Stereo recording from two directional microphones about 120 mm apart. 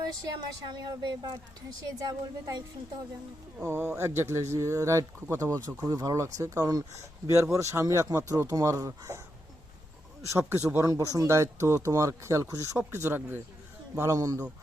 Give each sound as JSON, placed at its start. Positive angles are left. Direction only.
{"t": 0.0, "sound": "a woman's voice", "side_deg": -35}
{"t": 3.6, "sound": "speech", "side_deg": -20}
{"t": 10.3, "sound": "speech", "side_deg": -20}